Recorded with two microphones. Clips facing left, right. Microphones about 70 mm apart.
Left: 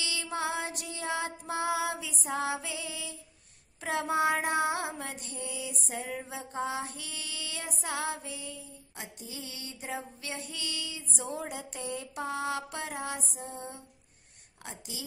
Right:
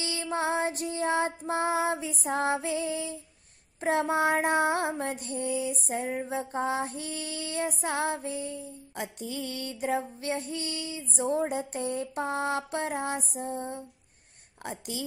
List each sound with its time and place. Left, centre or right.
0.0 s female singing: right
8.9 s female singing: right
14.6 s a woman's voice: right